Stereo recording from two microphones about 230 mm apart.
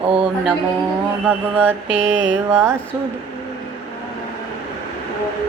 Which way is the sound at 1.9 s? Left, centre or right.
Right.